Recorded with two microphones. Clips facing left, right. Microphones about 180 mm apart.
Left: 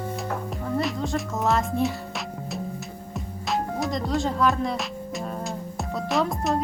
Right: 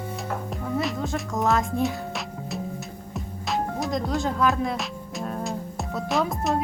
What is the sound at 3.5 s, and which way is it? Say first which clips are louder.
Music: even; centre (ahead or behind).